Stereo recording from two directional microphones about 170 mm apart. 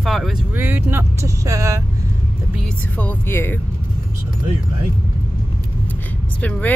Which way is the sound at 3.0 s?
10° left (ahead or behind).